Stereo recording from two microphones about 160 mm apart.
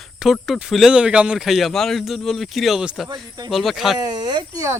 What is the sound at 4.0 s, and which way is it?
Speech, 25° right (ahead or behind).